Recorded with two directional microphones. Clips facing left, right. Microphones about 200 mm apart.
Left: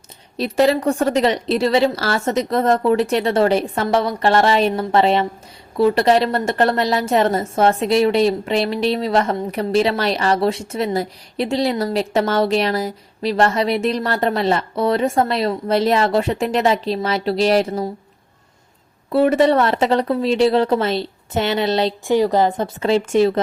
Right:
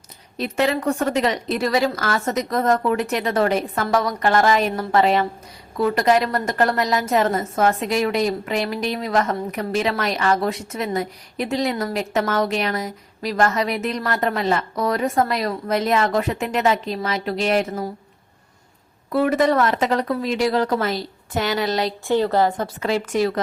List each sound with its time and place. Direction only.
0.3 s a woman's voice: 35° left (ahead or behind)
19.1 s a woman's voice: 30° left (ahead or behind)
22.0 s a woman's voice: 15° left (ahead or behind)